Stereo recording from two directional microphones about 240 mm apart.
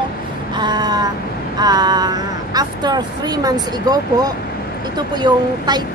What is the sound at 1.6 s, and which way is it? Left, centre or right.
Speech, centre.